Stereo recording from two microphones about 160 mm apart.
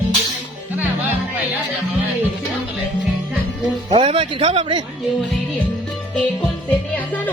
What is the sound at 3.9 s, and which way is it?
Speech, 35° right (ahead or behind).